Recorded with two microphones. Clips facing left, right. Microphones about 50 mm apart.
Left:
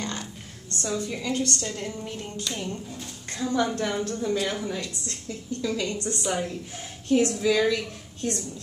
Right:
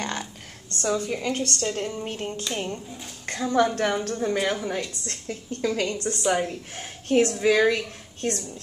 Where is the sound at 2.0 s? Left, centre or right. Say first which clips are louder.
Right 4 dB; right.